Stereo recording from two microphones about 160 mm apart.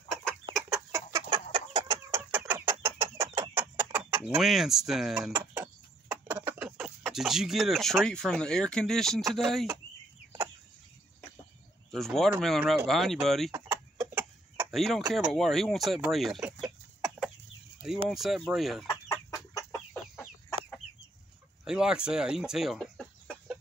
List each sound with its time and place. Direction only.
0.1 s chicken: 5° left (ahead or behind)
0.9 s chicken: 25° right (ahead or behind)
2.0 s chicken: 15° right (ahead or behind)
6.0 s speech: 10° right (ahead or behind)
11.9 s speech: centre (ahead or behind)
13.9 s chicken: 5° right (ahead or behind)
14.8 s speech: centre (ahead or behind)
19.3 s chicken: 15° left (ahead or behind)
21.6 s chicken: 5° right (ahead or behind)